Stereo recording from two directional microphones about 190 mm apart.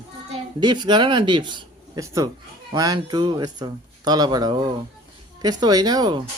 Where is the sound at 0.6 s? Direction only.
25° right (ahead or behind).